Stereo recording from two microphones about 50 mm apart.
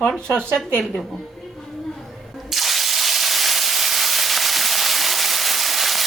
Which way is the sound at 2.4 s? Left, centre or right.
Centre.